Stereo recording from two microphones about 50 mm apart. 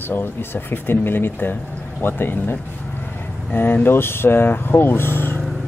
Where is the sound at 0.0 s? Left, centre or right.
Left.